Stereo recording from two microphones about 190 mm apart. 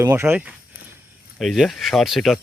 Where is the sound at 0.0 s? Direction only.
15° right (ahead or behind).